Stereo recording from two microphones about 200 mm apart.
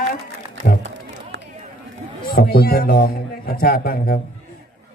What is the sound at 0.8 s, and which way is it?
Run, 65° right (ahead or behind).